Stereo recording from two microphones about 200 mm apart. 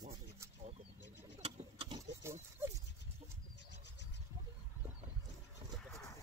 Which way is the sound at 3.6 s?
60° left (ahead or behind).